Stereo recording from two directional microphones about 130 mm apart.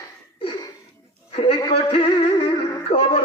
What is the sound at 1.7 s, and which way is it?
Music, 45° left (ahead or behind).